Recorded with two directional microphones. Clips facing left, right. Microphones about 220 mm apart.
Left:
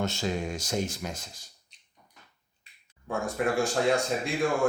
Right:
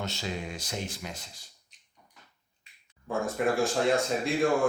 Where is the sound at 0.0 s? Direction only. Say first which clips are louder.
Left 5 dB; 50° left (ahead or behind).